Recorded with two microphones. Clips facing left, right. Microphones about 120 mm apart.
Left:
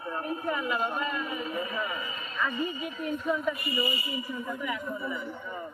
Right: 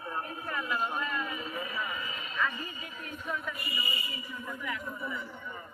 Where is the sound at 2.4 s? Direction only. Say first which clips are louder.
Left 4 dB; 15° left (ahead or behind).